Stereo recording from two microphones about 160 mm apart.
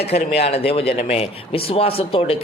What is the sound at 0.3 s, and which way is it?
A man's voice, 40° left (ahead or behind).